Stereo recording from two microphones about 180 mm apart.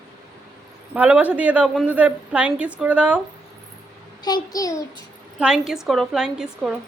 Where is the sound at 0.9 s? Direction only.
5° right (ahead or behind).